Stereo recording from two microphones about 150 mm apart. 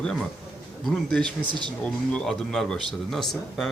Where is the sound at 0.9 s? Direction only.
5° left (ahead or behind).